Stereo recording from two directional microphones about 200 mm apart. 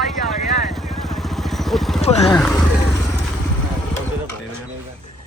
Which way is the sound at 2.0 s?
30° left (ahead or behind).